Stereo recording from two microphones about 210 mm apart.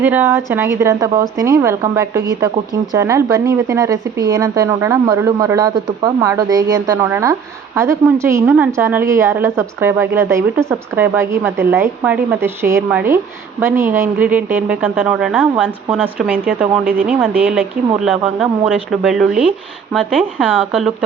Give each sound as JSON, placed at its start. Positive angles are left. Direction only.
{"t": 0.0, "sound": "a woman's voice", "side_deg": -10}